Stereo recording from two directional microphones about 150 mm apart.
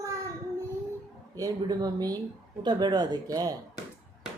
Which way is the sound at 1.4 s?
25° right (ahead or behind).